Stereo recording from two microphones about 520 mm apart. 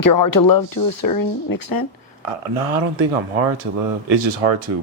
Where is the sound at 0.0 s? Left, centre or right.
Left.